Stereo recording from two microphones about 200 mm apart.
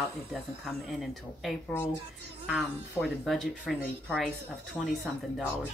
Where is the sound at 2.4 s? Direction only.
Centre (ahead or behind).